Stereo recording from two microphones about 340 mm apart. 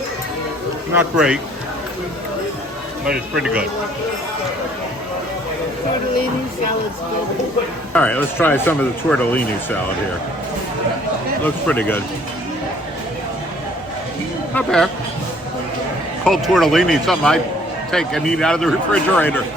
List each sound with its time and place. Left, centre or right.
0.9 s speech: centre
3.1 s speech: centre
7.9 s speech: centre
11.4 s speech: centre
14.5 s speech: centre
16.2 s speech: centre